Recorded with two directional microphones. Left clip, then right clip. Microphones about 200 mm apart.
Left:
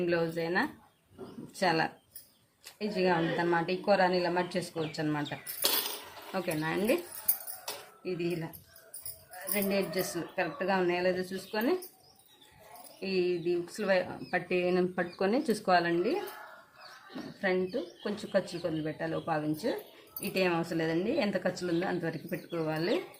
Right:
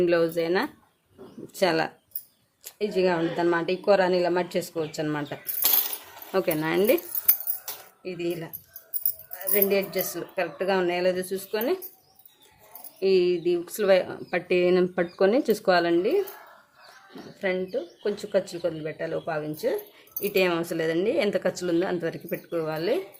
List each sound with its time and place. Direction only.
0.0 s speech: 50° right (ahead or behind)
8.0 s speech: 45° right (ahead or behind)
9.5 s speech: 45° right (ahead or behind)
13.0 s speech: 50° right (ahead or behind)
17.4 s speech: 35° right (ahead or behind)